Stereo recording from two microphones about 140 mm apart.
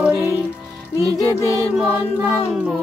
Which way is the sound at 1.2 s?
20° left (ahead or behind).